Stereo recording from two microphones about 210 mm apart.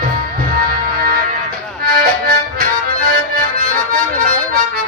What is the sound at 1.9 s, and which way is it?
Harmonica, 45° right (ahead or behind).